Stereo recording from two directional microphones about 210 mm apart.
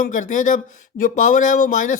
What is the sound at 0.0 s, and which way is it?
Speech, 40° left (ahead or behind).